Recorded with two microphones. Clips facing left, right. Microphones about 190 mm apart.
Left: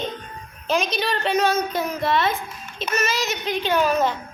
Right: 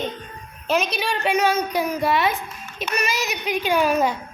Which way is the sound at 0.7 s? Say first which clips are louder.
Even; 5° right (ahead or behind).